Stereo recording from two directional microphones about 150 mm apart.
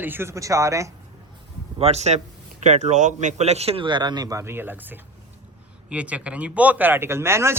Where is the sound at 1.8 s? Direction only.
45° right (ahead or behind).